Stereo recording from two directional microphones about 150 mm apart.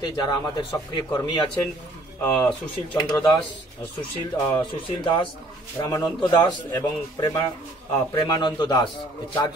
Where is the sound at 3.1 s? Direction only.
25° left (ahead or behind).